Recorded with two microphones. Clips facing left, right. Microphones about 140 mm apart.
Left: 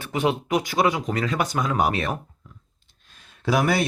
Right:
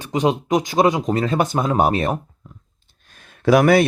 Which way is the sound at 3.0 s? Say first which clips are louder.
Right 9 dB; 55° right (ahead or behind).